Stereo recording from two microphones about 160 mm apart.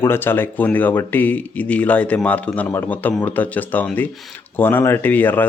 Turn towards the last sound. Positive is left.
turn(degrees=10)  # may be behind; listen again after turning